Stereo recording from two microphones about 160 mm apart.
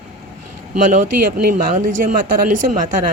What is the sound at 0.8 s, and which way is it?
Speech, 55° right (ahead or behind).